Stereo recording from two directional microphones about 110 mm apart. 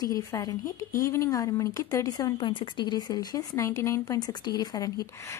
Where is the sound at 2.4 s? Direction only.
45° left (ahead or behind).